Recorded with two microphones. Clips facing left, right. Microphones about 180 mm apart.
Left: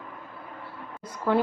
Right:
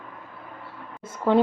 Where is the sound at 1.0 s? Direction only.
25° right (ahead or behind).